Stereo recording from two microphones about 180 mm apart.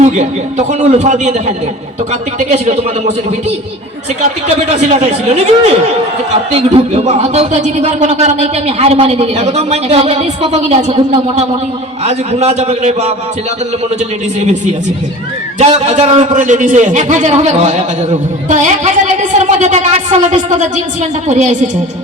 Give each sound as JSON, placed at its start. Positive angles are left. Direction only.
{"t": 0.7, "sound": "a man's voice", "side_deg": -40}
{"t": 4.4, "sound": "a man's voice", "side_deg": -35}
{"t": 15.5, "sound": "a man's voice", "side_deg": -35}